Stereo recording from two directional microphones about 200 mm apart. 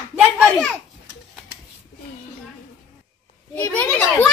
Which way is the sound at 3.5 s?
10° left (ahead or behind).